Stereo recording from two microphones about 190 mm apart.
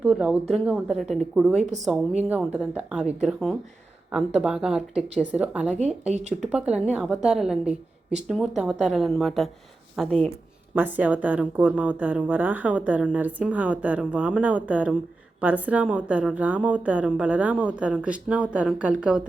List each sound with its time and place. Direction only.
0.0 s a woman's voice: 5° right (ahead or behind)
6.1 s speech: 35° right (ahead or behind)
6.5 s a woman's voice: 5° right (ahead or behind)